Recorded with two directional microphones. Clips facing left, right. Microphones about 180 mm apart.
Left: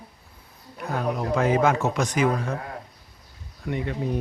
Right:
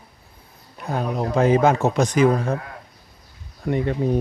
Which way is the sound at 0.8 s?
25° right (ahead or behind).